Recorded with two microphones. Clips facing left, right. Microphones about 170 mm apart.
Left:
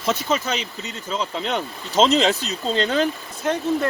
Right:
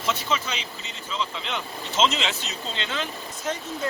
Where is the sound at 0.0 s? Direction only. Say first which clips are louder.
Left 5 dB; 40° left (ahead or behind).